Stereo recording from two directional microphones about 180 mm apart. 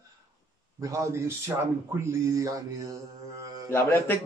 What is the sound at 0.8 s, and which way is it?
Speech, 15° right (ahead or behind).